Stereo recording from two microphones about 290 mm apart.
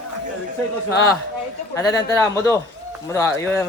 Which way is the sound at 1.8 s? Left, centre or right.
Centre.